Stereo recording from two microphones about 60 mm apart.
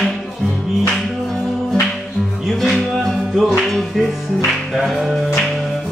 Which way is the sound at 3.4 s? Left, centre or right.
Centre.